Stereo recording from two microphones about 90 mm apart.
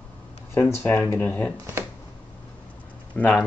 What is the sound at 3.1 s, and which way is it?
Speech, 15° left (ahead or behind).